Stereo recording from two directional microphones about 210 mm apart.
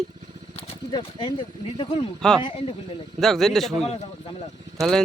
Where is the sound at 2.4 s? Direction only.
25° left (ahead or behind).